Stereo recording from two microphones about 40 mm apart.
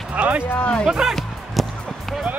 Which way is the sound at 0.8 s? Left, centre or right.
Centre.